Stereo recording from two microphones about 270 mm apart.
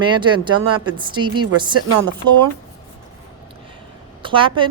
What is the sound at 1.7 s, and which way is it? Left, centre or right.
Speech, right.